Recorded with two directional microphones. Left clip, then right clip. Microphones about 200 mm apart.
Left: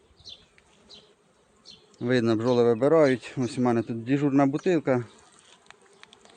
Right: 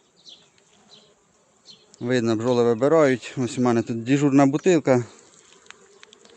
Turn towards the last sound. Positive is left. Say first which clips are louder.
# right 3 dB
turn(degrees=-5)  # may be behind; listen again after turning